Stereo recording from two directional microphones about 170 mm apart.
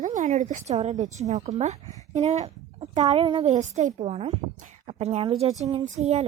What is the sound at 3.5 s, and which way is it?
A woman's voice, 45° right (ahead or behind).